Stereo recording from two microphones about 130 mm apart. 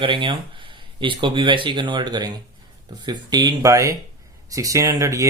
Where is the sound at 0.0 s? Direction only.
40° right (ahead or behind).